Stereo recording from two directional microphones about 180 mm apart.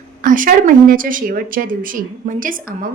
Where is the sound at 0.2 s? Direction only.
50° right (ahead or behind).